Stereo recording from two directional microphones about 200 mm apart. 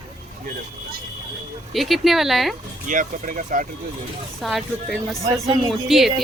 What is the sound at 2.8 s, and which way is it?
Speech, 40° right (ahead or behind).